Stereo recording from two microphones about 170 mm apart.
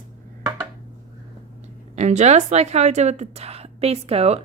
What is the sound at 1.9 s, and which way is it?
A woman's voice, 40° right (ahead or behind).